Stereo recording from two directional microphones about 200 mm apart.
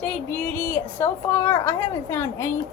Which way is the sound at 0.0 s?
5° left (ahead or behind).